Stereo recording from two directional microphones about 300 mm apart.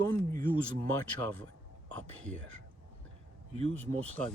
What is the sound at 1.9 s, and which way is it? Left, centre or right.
Speech, right.